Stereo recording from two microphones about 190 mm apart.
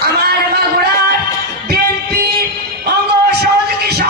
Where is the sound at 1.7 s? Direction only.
55° right (ahead or behind).